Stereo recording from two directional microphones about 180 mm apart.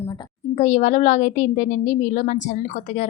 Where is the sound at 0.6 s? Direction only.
45° left (ahead or behind).